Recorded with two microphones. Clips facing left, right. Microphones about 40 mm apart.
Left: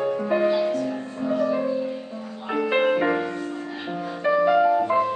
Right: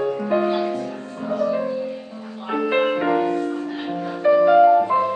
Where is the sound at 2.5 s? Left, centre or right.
Centre.